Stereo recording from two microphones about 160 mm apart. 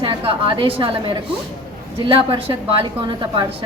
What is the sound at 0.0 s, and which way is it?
A woman's voice, 35° right (ahead or behind).